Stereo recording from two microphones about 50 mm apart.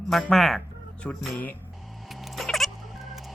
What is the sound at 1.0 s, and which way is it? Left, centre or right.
Speech, left.